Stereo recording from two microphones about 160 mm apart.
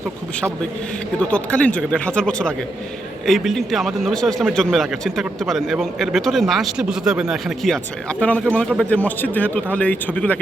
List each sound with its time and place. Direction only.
1.2 s a man's voice: 5° left (ahead or behind)